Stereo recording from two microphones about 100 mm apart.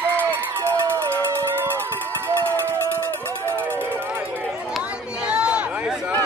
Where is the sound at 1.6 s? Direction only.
20° right (ahead or behind).